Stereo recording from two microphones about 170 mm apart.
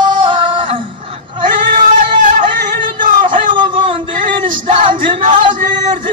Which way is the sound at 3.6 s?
30° right (ahead or behind).